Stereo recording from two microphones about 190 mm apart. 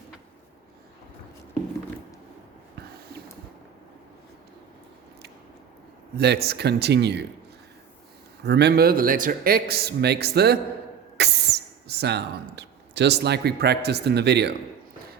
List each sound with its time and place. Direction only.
6.1 s a man's voice: 60° right (ahead or behind)
8.4 s a man's voice: 60° right (ahead or behind)
11.2 s a sound: 60° right (ahead or behind)
12.5 s a man's voice: 65° right (ahead or behind)